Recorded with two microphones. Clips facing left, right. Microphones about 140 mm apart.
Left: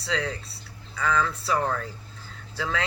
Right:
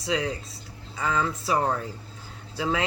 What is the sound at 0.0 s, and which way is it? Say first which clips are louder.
Speech: right 2 dB; 15° right (ahead or behind).